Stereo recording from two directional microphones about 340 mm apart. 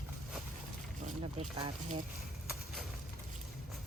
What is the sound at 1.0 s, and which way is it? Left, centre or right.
Speech, centre.